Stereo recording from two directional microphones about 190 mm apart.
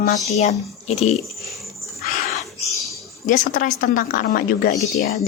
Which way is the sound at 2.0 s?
40° left (ahead or behind).